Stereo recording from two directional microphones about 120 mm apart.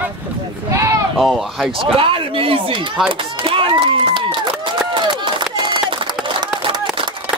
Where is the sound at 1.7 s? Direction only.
50° right (ahead or behind).